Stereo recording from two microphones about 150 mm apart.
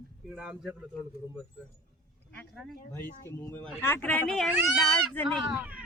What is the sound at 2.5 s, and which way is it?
Speech, 5° left (ahead or behind).